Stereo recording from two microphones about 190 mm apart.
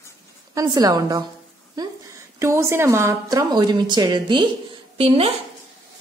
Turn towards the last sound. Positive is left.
turn(degrees=-30)  # may be behind; listen again after turning